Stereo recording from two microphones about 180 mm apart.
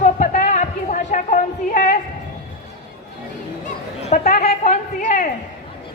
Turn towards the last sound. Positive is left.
turn(degrees=45)  # may be behind; listen again after turning